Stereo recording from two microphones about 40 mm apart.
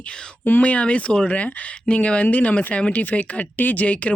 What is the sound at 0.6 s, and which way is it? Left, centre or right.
Speech, left.